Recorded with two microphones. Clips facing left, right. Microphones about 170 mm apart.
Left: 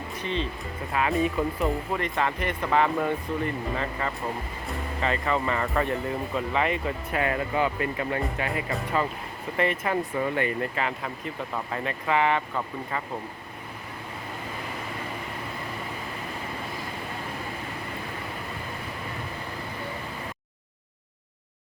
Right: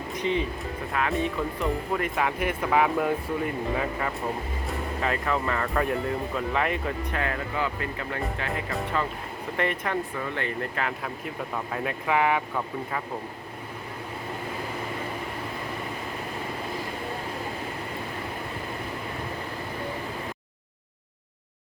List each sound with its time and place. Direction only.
0.2 s speech: 15° right (ahead or behind)
0.9 s speech: 5° left (ahead or behind)
7.2 s speech: 20° left (ahead or behind)
9.6 s speech: 5° left (ahead or behind)